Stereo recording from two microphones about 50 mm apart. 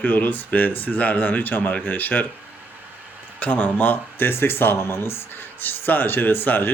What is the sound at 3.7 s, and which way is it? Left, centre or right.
Speech, left.